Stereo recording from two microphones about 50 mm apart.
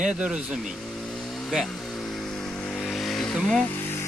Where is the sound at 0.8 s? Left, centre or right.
Left.